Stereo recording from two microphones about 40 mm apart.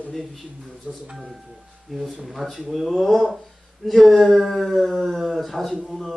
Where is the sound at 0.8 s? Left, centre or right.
Right.